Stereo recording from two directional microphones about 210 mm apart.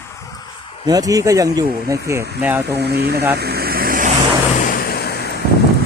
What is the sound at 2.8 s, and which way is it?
Speech, 50° right (ahead or behind).